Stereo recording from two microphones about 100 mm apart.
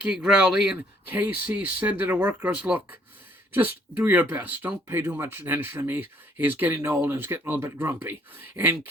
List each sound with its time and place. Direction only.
0.0 s speech: 5° right (ahead or behind)